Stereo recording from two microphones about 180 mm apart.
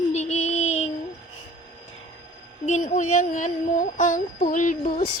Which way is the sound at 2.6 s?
40° left (ahead or behind).